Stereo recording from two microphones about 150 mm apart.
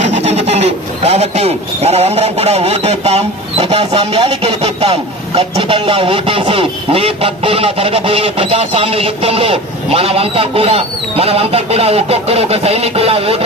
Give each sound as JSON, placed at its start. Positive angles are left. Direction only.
{"t": 0.0, "sound": "speech", "side_deg": -45}